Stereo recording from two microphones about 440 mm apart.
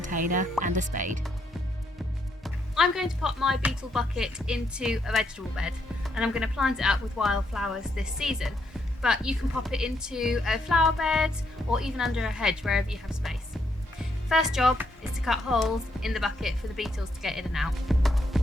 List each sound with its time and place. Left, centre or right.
0.0 s speech: centre
2.4 s speech: centre